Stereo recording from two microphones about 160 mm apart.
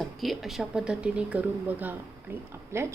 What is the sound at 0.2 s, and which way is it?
A woman's voice, centre (ahead or behind).